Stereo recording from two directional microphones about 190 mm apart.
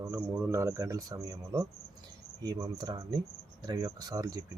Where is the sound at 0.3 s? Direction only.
10° right (ahead or behind).